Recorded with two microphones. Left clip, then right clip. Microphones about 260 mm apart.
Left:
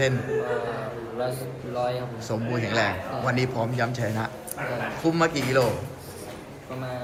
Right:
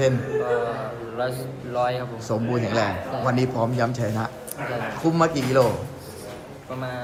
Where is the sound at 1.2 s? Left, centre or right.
Centre.